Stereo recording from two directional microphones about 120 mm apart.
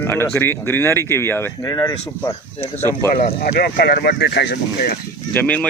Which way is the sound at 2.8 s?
20° left (ahead or behind).